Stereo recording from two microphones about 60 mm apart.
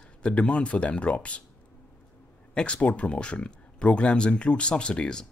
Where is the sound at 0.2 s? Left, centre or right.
Left.